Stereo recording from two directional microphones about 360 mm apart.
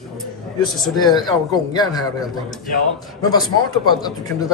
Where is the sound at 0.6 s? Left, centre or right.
Centre.